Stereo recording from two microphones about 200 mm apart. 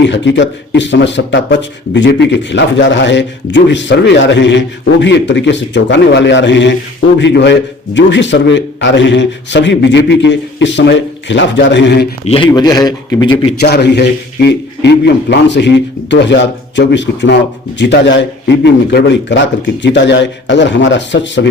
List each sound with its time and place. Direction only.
0.1 s speech: 65° left (ahead or behind)
12.3 s a man's voice: 20° left (ahead or behind)
13.6 s speech: 55° left (ahead or behind)